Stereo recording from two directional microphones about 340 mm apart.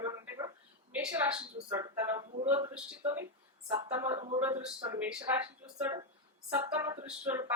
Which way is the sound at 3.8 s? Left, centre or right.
Centre.